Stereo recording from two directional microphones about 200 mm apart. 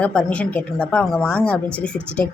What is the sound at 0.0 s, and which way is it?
A woman's voice, 5° left (ahead or behind).